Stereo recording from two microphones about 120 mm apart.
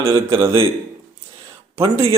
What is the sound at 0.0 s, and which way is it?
Speech, 50° right (ahead or behind).